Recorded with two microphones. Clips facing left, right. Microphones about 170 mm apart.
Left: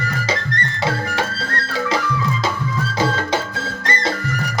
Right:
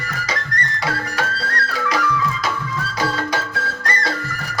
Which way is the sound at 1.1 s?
25° left (ahead or behind).